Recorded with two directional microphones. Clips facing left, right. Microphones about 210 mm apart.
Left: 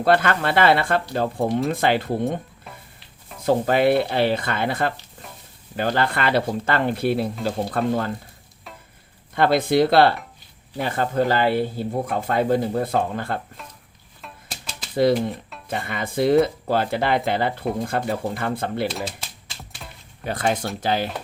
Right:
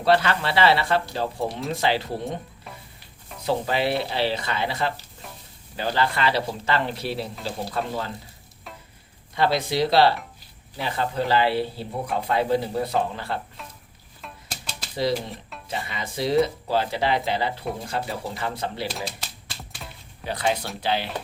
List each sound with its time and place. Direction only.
0.0 s speech: 50° left (ahead or behind)
3.4 s speech: 50° left (ahead or behind)
9.3 s speech: 55° left (ahead or behind)
14.2 s music: centre (ahead or behind)
15.7 s speech: 55° left (ahead or behind)
19.8 s a sound: centre (ahead or behind)
20.2 s speech: 50° left (ahead or behind)